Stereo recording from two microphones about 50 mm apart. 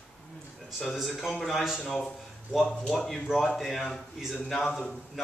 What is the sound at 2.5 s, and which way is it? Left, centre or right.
A man's voice, centre.